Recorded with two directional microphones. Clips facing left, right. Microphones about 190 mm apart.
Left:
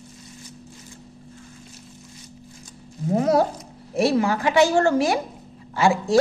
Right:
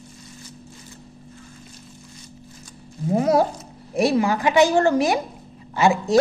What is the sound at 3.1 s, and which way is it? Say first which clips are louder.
A woman's voice: right 1 dB; 10° right (ahead or behind).